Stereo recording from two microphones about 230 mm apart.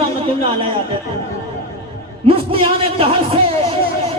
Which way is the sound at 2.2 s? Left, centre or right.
Right.